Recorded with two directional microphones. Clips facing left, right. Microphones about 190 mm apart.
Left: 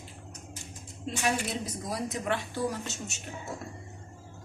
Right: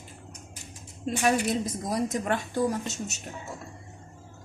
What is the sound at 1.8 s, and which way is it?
Speech, 45° right (ahead or behind).